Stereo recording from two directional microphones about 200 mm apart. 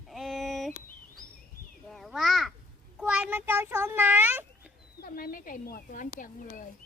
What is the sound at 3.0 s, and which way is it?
A child's voice, 5° right (ahead or behind).